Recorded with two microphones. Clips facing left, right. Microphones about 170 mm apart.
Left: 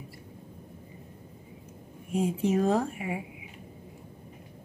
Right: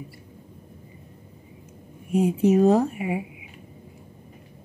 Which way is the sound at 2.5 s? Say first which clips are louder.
Right 8 dB; 15° right (ahead or behind).